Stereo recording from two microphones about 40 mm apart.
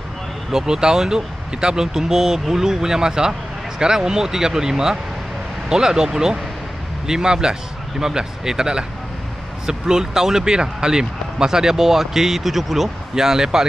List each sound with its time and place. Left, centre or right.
0.5 s speech: centre